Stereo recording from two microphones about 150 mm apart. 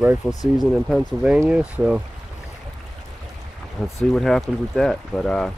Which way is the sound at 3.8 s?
5° left (ahead or behind).